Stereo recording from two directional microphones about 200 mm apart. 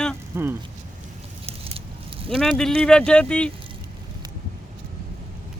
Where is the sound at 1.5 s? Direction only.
30° right (ahead or behind).